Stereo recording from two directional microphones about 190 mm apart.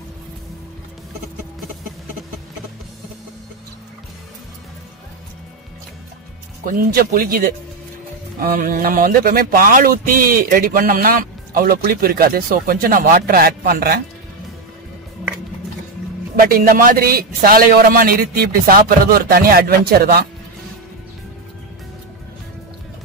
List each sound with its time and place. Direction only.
6.6 s speech: 50° right (ahead or behind)
16.3 s speech: 50° right (ahead or behind)